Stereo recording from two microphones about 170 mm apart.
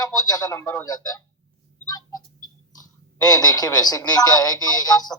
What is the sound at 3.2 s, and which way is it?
Speech, 20° left (ahead or behind).